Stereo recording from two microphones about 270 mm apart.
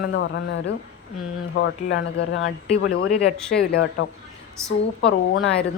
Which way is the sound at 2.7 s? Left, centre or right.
Left.